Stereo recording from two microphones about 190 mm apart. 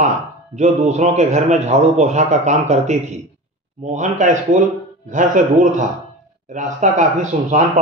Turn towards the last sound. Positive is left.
turn(degrees=-40)  # may be behind; listen again after turning